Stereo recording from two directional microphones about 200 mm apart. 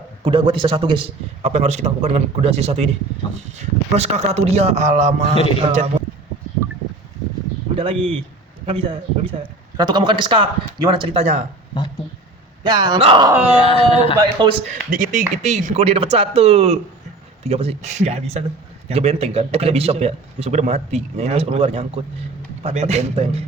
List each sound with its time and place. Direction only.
0.3 s a man's voice: 25° right (ahead or behind)
7.8 s a man's voice: 25° right (ahead or behind)
12.6 s a man's voice: 20° right (ahead or behind)
13.2 s speech: 10° right (ahead or behind)
13.6 s speech: 30° left (ahead or behind)
14.2 s a man's voice: 25° right (ahead or behind)
14.9 s a man's voice: 40° right (ahead or behind)